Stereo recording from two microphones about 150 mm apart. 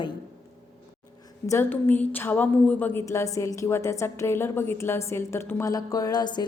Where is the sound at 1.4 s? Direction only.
20° left (ahead or behind).